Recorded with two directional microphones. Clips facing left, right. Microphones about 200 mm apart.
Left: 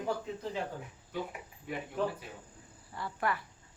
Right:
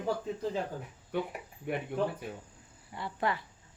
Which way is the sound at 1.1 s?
65° right (ahead or behind).